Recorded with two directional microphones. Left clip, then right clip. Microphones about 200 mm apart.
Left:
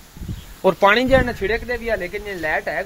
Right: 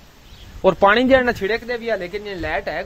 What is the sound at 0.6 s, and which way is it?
Speech, 15° right (ahead or behind).